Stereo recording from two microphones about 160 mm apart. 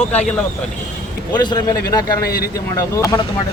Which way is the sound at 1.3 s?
25° left (ahead or behind).